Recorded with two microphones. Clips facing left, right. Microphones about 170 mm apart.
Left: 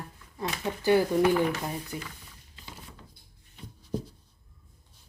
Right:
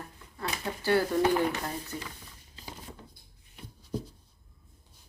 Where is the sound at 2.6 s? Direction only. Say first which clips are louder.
Right 3 dB; 35° right (ahead or behind).